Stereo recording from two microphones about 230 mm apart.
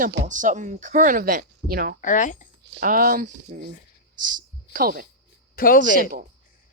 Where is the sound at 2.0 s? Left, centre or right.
Left.